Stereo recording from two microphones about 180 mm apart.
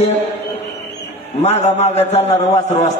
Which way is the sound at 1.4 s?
35° left (ahead or behind).